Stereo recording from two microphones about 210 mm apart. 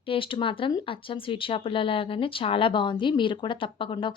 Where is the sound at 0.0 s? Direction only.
25° left (ahead or behind).